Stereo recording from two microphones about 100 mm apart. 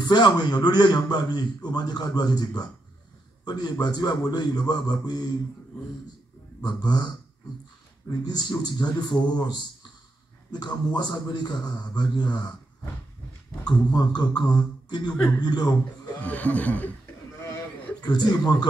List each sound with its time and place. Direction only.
0.0 s a man's voice: 45° left (ahead or behind)
5.7 s speech: 15° left (ahead or behind)
6.6 s a man's voice: 45° left (ahead or behind)
8.3 s a man's voice: 45° left (ahead or behind)
13.7 s a man's voice: 45° left (ahead or behind)
16.2 s speech: 15° left (ahead or behind)
18.0 s a man's voice: 40° left (ahead or behind)